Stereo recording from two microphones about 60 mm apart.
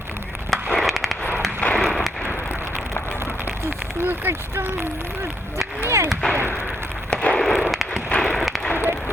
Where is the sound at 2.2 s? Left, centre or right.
Right.